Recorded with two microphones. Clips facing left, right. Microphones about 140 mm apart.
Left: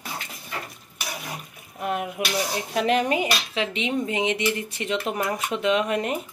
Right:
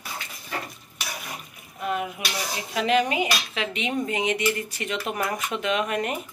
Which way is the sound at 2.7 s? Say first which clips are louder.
Even; 45° left (ahead or behind).